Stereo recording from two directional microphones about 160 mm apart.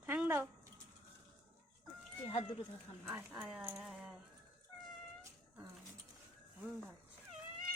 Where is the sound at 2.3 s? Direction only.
30° left (ahead or behind).